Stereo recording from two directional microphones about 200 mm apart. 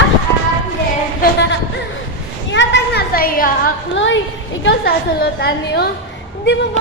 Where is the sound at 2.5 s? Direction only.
60° left (ahead or behind).